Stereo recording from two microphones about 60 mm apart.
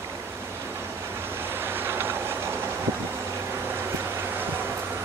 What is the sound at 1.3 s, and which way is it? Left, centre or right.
Train, right.